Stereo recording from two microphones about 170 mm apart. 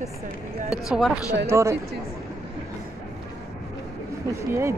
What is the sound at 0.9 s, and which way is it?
Speech, 5° right (ahead or behind).